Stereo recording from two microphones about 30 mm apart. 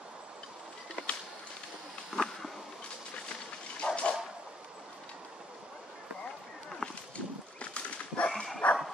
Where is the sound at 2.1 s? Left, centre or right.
Centre.